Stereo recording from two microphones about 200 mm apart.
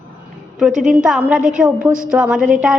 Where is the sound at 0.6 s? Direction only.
Centre (ahead or behind).